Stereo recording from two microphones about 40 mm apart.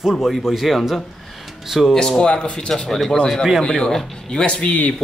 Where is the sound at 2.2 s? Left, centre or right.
Left.